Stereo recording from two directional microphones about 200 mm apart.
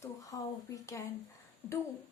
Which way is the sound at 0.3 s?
15° left (ahead or behind).